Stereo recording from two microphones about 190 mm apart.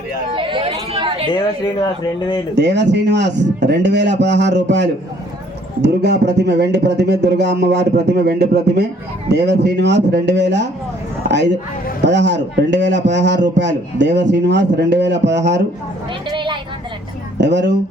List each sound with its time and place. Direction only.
0.3 s a sound: 25° right (ahead or behind)
2.6 s a man's voice: 65° right (ahead or behind)
16.3 s vehicle: 25° right (ahead or behind)
17.3 s speech: 65° right (ahead or behind)